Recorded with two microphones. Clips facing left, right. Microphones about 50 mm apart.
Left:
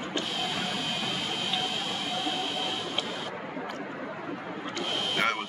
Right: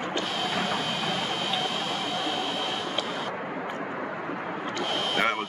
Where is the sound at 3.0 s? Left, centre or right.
Right.